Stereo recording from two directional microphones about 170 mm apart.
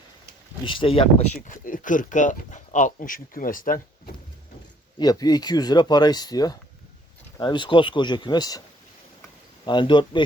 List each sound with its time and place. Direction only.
0.6 s speech: 30° left (ahead or behind)
1.5 s speech: 50° left (ahead or behind)
4.9 s speech: 20° left (ahead or behind)
9.6 s speech: 25° left (ahead or behind)